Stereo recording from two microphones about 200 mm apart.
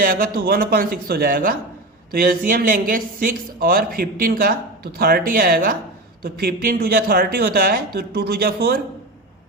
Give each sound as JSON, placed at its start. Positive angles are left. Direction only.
{"t": 0.0, "sound": "speech", "side_deg": -45}